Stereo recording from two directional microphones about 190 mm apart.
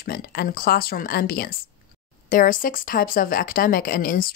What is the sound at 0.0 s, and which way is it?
Speech, 55° left (ahead or behind).